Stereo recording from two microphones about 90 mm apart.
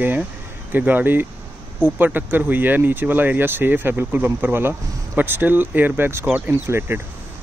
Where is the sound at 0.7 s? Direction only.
20° right (ahead or behind).